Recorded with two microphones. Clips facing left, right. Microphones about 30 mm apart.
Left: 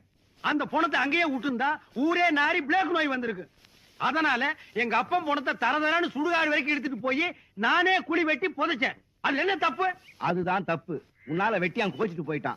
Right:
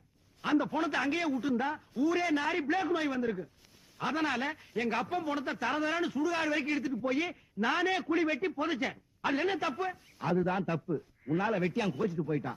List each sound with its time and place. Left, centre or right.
0.4 s a man's voice: left